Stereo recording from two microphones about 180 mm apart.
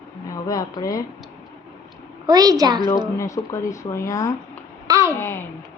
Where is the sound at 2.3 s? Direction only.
20° right (ahead or behind).